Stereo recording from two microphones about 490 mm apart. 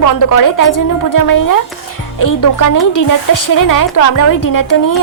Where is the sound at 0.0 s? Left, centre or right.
Left.